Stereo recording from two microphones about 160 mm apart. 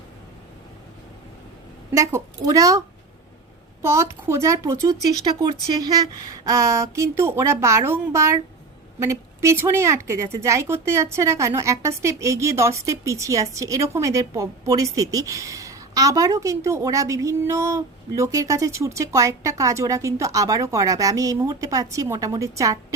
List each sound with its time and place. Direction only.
1.9 s a woman's voice: 20° right (ahead or behind)
3.8 s a woman's voice: 15° right (ahead or behind)